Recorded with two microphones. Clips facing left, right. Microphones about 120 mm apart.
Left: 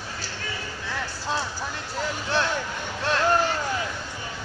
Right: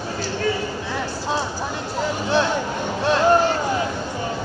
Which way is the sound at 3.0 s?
20° right (ahead or behind).